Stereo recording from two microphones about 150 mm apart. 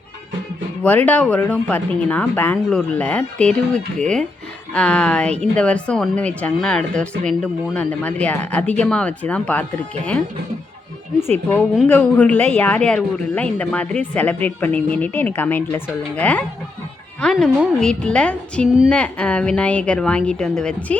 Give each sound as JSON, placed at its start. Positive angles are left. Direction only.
{"t": 0.8, "sound": "speech", "side_deg": 10}
{"t": 4.7, "sound": "speech", "side_deg": 5}
{"t": 11.5, "sound": "speech", "side_deg": 15}
{"t": 17.3, "sound": "a woman's voice", "side_deg": -5}